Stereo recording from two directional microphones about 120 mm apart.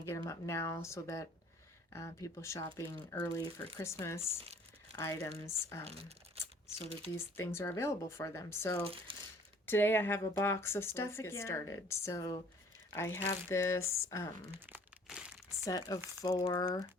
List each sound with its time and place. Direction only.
0.0 s speech: 25° left (ahead or behind)
5.8 s speech: 55° right (ahead or behind)
7.3 s speech: 25° left (ahead or behind)
8.9 s speech: 50° right (ahead or behind)
9.6 s speech: 20° left (ahead or behind)
15.0 s crumpling: 5° right (ahead or behind)
15.6 s speech: 30° left (ahead or behind)